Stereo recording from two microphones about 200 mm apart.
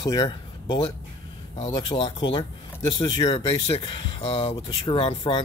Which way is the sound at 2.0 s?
25° left (ahead or behind).